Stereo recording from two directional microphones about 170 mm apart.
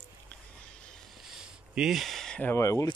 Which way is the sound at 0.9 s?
Centre (ahead or behind).